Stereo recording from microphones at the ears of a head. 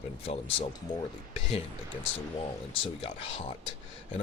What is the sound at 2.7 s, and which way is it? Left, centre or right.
Speech, left.